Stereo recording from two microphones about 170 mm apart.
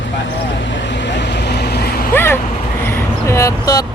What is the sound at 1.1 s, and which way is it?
Vehicle, 85° left.